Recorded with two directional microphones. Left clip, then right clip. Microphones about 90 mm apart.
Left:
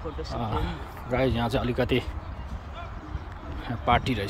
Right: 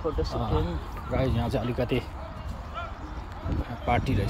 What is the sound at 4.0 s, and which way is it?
Speech, 30° left (ahead or behind).